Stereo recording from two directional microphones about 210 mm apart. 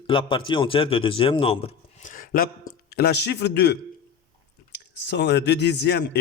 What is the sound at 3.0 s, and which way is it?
Speech, 50° left (ahead or behind).